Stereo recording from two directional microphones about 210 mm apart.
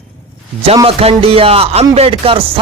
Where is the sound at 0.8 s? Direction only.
25° right (ahead or behind).